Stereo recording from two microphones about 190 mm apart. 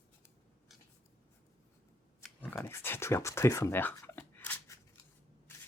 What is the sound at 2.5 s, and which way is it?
Writing, 10° left (ahead or behind).